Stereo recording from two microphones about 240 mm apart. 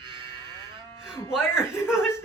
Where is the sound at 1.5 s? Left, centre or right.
Centre.